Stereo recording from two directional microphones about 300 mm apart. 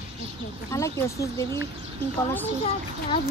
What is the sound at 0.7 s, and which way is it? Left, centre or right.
Speech, centre.